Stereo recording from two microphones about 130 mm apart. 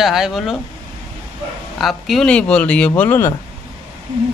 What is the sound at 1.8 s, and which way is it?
Speech, centre (ahead or behind).